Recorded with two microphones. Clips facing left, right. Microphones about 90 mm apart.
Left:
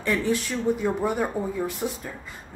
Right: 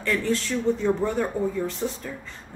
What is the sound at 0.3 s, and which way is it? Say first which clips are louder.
A woman's voice: even; 15° left (ahead or behind).